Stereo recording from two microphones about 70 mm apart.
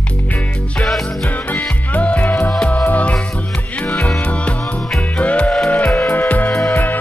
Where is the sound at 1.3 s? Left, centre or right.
Left.